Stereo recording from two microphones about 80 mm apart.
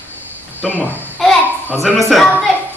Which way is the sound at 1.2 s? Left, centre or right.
Centre.